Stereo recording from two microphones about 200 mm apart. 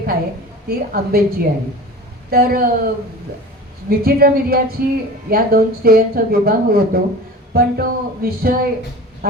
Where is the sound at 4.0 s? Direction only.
50° right (ahead or behind).